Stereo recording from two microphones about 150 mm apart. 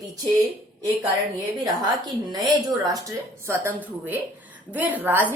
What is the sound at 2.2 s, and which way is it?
A woman's voice, 30° right (ahead or behind).